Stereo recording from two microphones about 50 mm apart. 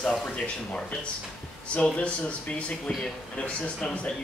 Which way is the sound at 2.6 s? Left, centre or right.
Left.